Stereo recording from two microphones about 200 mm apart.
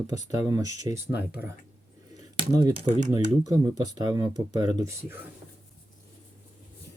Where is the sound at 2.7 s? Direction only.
35° right (ahead or behind).